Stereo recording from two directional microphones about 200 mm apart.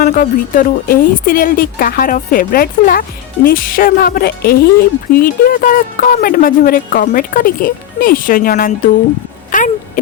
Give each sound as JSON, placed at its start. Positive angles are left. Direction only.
{"t": 0.0, "sound": "speech", "side_deg": 45}